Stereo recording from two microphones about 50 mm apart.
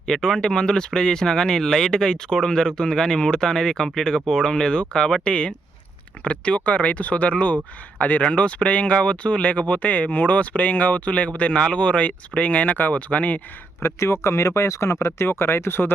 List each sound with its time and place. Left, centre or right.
0.0 s speech: centre; by 13.4 s left
13.8 s speech: left
15.3 s speech: left